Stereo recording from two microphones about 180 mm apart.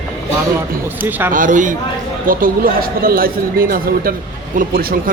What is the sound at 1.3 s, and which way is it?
Speech, 45° right (ahead or behind).